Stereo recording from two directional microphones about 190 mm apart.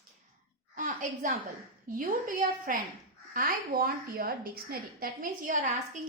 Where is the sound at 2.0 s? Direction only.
45° right (ahead or behind).